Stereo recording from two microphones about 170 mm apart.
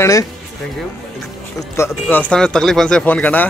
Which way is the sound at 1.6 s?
15° left (ahead or behind).